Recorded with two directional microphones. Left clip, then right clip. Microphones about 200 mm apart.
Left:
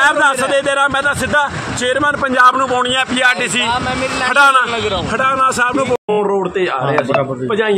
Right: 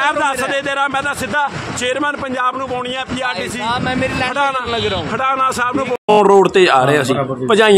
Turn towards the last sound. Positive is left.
turn(degrees=-50)  # may be behind; listen again after turning